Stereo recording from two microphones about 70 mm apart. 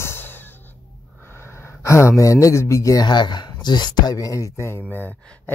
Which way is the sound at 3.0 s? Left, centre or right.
Left.